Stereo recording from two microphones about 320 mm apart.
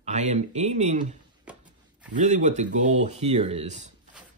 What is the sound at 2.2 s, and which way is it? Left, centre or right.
Speech, right.